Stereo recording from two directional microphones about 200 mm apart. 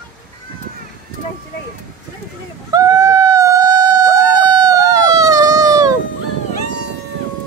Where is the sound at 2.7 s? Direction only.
15° right (ahead or behind).